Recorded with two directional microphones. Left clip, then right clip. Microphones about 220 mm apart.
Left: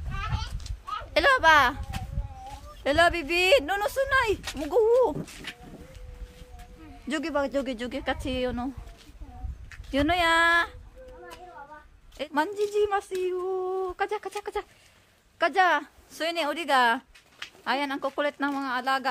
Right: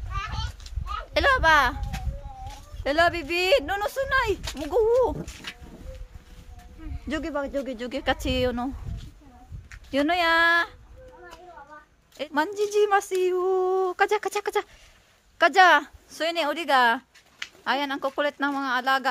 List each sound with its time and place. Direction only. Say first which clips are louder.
0.7 s a sound: left 2 dB; centre (ahead or behind)
2.8 s speech: even; centre (ahead or behind)
7.1 s speech: left 1 dB; centre (ahead or behind)
7.9 s a woman's voice: right 8 dB; 20° right (ahead or behind)
9.7 s speech: right 1 dB; 10° right (ahead or behind)
12.2 s a woman's voice: right 2 dB; 10° right (ahead or behind)
12.6 s a sound: right 4 dB; 30° right (ahead or behind)
15.3 s speech: right 6 dB; 25° right (ahead or behind)